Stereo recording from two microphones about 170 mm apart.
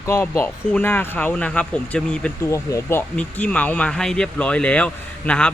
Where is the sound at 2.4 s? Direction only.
20° left (ahead or behind).